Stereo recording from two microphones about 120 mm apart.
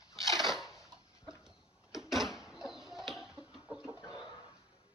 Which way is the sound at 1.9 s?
5° right (ahead or behind).